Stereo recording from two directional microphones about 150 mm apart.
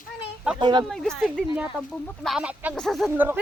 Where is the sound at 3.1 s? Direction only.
10° right (ahead or behind).